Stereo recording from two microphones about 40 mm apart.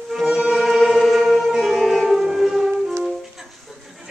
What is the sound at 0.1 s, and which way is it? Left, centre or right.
Music, centre.